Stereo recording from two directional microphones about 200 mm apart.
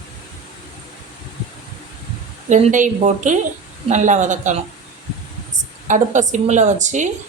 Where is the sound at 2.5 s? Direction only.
40° right (ahead or behind).